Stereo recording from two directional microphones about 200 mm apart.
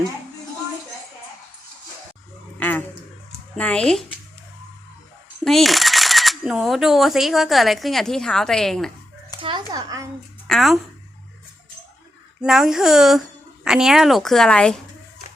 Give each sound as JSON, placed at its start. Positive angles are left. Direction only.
{"t": 2.6, "sound": "a sound", "side_deg": 10}
{"t": 3.6, "sound": "speech", "side_deg": 5}
{"t": 5.5, "sound": "speech", "side_deg": 0}
{"t": 9.4, "sound": "a sound", "side_deg": -20}
{"t": 10.4, "sound": "speech", "side_deg": 0}
{"t": 12.4, "sound": "speech", "side_deg": 0}